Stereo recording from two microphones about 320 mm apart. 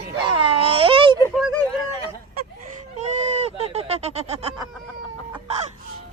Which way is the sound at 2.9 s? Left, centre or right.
Right.